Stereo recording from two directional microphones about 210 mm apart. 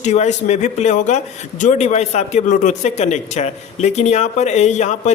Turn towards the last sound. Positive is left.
turn(degrees=35)  # may be behind; listen again after turning